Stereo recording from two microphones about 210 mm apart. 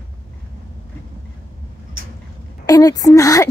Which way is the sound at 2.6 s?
15° left (ahead or behind).